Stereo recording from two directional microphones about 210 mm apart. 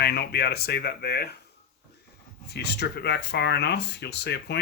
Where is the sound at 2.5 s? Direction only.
50° left (ahead or behind).